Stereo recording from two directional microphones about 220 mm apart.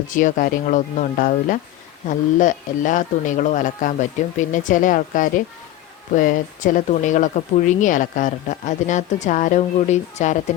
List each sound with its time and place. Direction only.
0.1 s speech: 35° left (ahead or behind)